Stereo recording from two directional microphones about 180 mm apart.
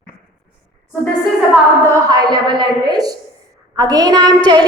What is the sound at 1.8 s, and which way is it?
A woman's voice, 15° right (ahead or behind).